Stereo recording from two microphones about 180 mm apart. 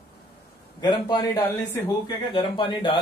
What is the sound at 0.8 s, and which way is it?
Speech, 20° left (ahead or behind).